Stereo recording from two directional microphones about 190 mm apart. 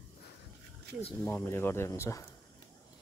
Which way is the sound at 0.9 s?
60° right (ahead or behind).